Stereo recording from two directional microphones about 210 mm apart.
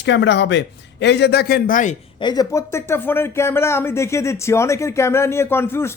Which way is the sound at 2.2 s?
20° left (ahead or behind).